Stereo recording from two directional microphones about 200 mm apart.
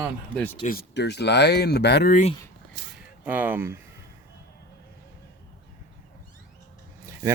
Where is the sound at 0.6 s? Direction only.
50° left (ahead or behind).